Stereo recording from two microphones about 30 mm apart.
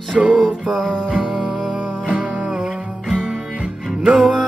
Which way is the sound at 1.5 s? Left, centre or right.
Right.